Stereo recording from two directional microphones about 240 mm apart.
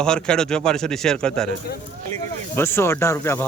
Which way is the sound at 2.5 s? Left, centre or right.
Centre.